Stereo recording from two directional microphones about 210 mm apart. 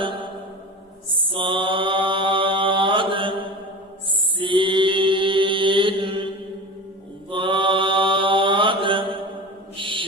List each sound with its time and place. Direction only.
1.1 s mantra: 25° right (ahead or behind)